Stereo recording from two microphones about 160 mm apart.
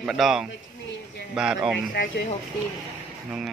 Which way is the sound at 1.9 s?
80° left.